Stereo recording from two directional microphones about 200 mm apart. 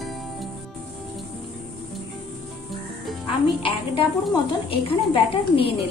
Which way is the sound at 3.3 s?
25° left (ahead or behind).